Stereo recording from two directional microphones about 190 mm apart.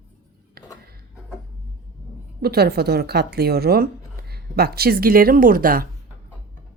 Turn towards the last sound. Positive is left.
turn(degrees=-50)  # may be behind; listen again after turning